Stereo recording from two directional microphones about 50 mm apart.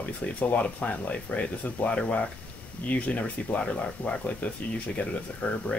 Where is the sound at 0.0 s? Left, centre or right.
Left.